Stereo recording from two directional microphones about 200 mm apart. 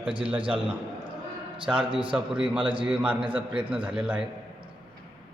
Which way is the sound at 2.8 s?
5° right (ahead or behind).